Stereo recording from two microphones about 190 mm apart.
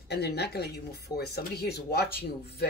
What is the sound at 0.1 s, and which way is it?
Speech, 60° left (ahead or behind).